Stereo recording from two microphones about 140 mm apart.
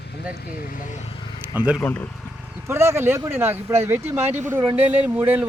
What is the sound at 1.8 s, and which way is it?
Speech, 15° left (ahead or behind).